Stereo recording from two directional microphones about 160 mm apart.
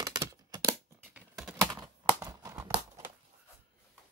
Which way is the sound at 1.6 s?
20° right (ahead or behind).